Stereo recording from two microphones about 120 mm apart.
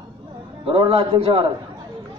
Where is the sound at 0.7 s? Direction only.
50° right (ahead or behind).